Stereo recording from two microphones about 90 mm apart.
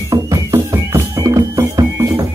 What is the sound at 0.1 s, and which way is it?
Music, 40° right (ahead or behind).